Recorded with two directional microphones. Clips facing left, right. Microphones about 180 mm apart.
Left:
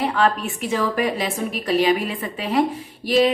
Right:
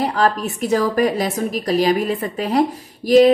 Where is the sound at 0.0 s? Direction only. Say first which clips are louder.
Right 2 dB; 40° right (ahead or behind).